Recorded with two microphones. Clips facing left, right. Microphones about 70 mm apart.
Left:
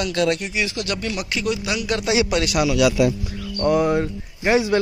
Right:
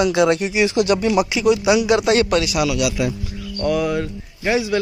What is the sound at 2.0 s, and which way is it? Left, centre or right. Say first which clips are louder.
Speech: right 4 dB; centre.